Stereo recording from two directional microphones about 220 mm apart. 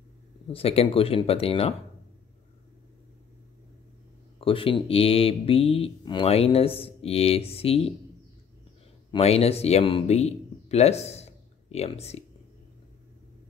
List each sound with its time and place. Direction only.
0.5 s speech: 25° left (ahead or behind)
4.4 s speech: 25° left (ahead or behind)
9.1 s speech: 25° left (ahead or behind)